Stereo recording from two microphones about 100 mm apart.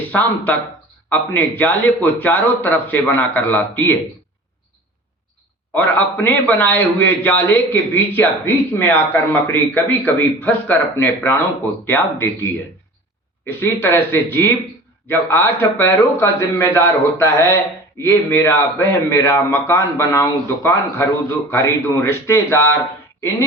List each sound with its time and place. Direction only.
0.1 s a man's voice: 15° left (ahead or behind)
5.7 s a man's voice: 15° left (ahead or behind)